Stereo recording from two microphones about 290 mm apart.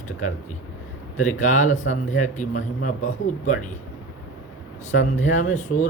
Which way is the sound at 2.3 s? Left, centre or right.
Left.